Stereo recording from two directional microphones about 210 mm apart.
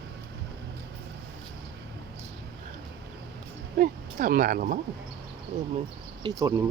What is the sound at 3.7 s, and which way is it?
Speech, 40° right (ahead or behind).